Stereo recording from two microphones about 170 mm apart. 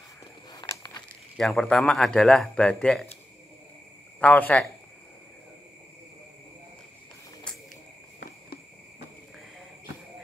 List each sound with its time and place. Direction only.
0.5 s a sound: 20° left (ahead or behind)
1.3 s speech: centre (ahead or behind)
4.2 s speech: 10° left (ahead or behind)